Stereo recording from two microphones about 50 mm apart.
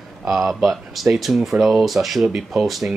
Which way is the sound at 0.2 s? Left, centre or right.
Centre.